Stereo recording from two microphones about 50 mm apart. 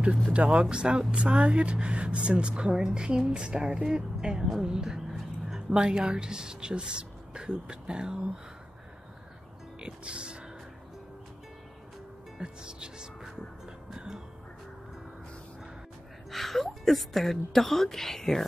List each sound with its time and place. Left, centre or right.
0.3 s speech: right
9.8 s speech: right
12.4 s speech: centre
13.9 s music: centre
16.3 s a sound: centre
16.6 s a woman's voice: centre